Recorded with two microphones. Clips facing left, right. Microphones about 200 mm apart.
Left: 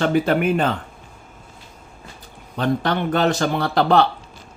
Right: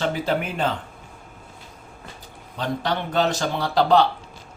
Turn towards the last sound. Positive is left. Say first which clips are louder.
# left 1 dB
turn(degrees=55)  # may be behind; listen again after turning